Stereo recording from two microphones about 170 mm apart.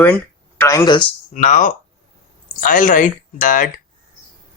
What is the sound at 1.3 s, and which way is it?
Speech, 45° left (ahead or behind).